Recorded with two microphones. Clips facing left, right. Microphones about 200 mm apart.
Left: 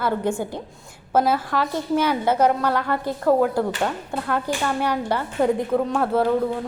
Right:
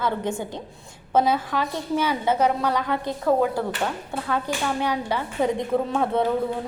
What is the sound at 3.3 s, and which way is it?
Speech, 10° left (ahead or behind).